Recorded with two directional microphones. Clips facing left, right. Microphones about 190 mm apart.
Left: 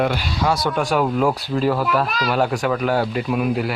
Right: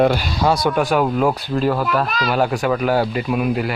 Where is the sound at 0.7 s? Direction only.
5° right (ahead or behind).